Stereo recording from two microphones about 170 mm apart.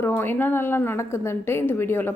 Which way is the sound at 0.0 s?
10° left (ahead or behind).